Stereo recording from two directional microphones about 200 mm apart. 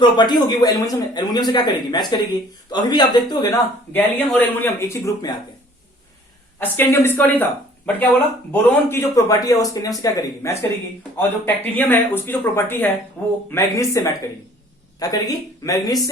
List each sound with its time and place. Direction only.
0.0 s speech: 20° left (ahead or behind)
3.9 s speech: 10° left (ahead or behind)
6.6 s speech: 10° left (ahead or behind)
8.9 s speech: 15° left (ahead or behind)